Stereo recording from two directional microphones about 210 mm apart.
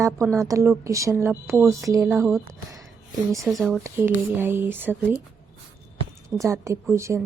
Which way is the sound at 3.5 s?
Centre (ahead or behind).